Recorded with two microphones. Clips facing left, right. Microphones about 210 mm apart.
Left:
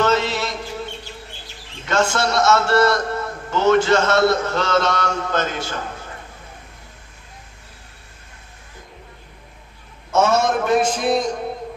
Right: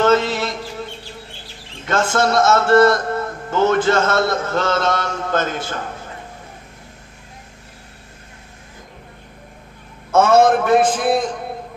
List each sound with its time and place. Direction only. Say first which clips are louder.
0.0 s mantra: right 3 dB; 50° right (ahead or behind)
1.9 s a man's voice: right 2 dB; 50° right (ahead or behind)
10.1 s a man's voice: right 5 dB; 55° right (ahead or behind)